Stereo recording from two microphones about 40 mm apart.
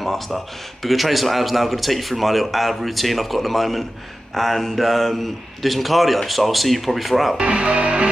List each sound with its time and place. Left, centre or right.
0.0 s a sound: centre
0.8 s a man's voice: centre
7.3 s speech: right